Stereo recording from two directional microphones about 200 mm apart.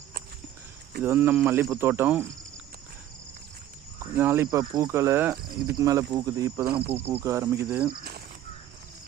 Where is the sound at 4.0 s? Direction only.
10° right (ahead or behind).